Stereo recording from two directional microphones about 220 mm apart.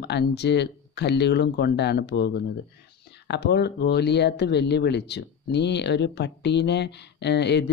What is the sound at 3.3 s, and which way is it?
Speech, 50° left (ahead or behind).